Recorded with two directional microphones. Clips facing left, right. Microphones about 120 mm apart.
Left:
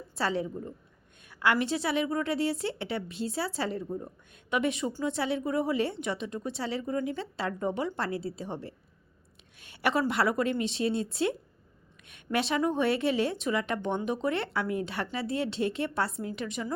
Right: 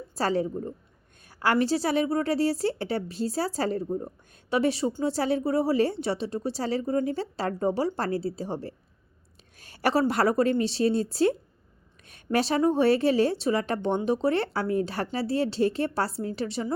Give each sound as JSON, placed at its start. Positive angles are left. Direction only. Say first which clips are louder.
{"t": 0.2, "sound": "speech", "louder": "right 4 dB", "side_deg": -40}